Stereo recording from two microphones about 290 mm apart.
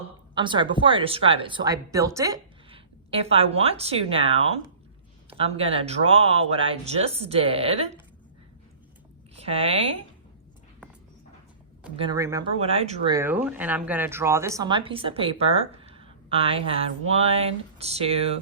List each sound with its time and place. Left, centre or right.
0.3 s speech: centre
9.3 s a sound: right
11.9 s speech: centre
13.1 s speech: centre